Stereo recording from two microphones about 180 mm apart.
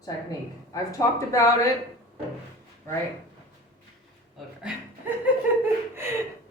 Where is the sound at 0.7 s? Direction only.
15° left (ahead or behind).